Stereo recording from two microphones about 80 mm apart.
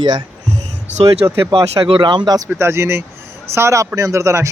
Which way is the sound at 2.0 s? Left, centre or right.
Right.